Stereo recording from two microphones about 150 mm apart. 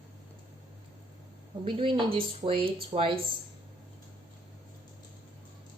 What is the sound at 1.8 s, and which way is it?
Speech, 35° right (ahead or behind).